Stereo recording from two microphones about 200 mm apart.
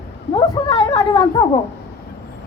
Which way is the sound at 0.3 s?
20° left (ahead or behind).